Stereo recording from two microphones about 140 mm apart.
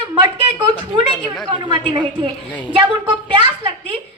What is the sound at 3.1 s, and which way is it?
Speech, 35° right (ahead or behind).